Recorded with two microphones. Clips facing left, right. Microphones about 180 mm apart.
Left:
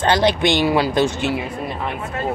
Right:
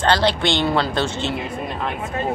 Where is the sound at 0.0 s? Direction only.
20° left (ahead or behind).